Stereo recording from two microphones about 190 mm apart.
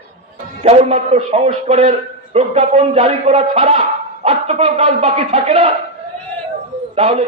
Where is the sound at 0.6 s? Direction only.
35° right (ahead or behind).